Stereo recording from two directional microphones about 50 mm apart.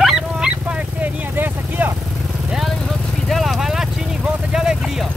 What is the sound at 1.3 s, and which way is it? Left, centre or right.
Vehicle, right.